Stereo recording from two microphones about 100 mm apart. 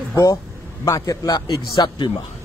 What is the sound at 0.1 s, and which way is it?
A man's voice, 30° left (ahead or behind).